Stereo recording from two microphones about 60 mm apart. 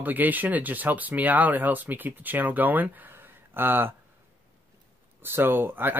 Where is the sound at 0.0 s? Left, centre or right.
Right.